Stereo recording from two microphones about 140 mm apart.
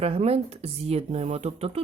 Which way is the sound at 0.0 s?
45° right (ahead or behind).